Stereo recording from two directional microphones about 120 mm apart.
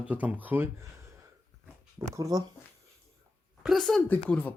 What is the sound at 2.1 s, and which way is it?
Speech, 25° right (ahead or behind).